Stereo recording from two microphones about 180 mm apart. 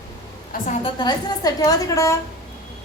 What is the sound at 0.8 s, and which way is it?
A woman's voice, 25° left (ahead or behind).